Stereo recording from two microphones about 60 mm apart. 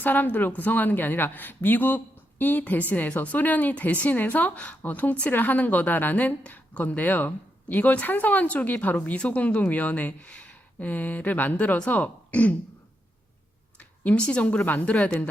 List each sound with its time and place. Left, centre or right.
0.0 s a woman's voice: left
13.7 s a woman's voice: left